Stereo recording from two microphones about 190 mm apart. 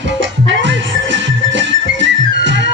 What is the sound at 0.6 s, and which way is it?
Music, 70° right (ahead or behind).